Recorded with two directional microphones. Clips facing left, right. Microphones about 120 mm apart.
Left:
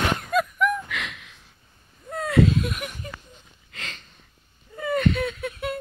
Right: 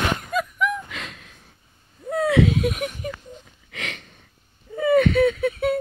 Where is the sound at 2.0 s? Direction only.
65° right (ahead or behind).